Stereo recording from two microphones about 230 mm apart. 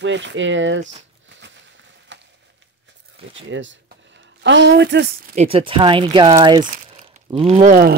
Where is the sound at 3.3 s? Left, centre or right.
Right.